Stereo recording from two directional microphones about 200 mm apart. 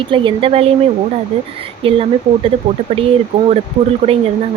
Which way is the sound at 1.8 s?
25° right (ahead or behind).